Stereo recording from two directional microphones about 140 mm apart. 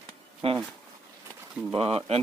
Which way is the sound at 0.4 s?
45° right (ahead or behind).